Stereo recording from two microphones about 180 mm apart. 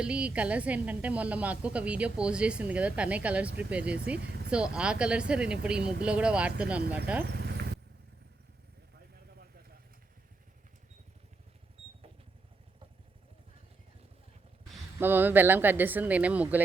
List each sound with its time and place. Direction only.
0.0 s a woman's voice: 5° right (ahead or behind)
4.2 s vehicle: 70° right (ahead or behind)
4.5 s speech: 5° right (ahead or behind)
7.3 s vehicle: 65° right (ahead or behind)
14.9 s a woman's voice: 10° right (ahead or behind)